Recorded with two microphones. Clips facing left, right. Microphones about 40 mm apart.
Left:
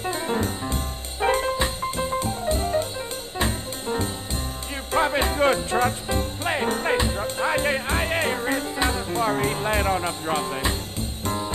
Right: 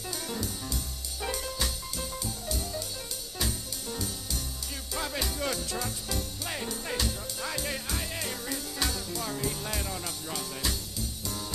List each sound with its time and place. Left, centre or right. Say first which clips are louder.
0.0 s music: left 10 dB; left